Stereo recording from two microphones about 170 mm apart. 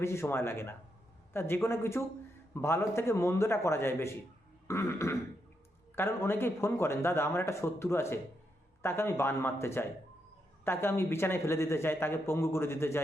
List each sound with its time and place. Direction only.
0.0 s speech: 15° left (ahead or behind)